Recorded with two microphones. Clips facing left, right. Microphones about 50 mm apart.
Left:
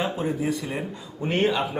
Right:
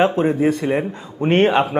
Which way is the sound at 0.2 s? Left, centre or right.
Right.